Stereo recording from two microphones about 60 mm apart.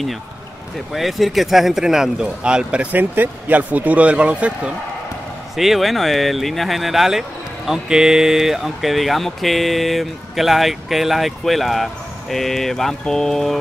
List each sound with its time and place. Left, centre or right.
0.9 s speech: centre
5.6 s speech: centre